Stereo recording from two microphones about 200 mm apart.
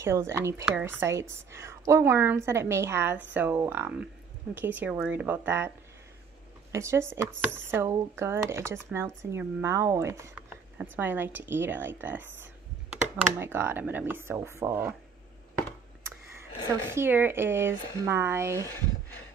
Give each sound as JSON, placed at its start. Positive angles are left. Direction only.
{"t": 0.0, "sound": "speech", "side_deg": -15}
{"t": 6.7, "sound": "speech", "side_deg": -15}
{"t": 16.3, "sound": "speech", "side_deg": -10}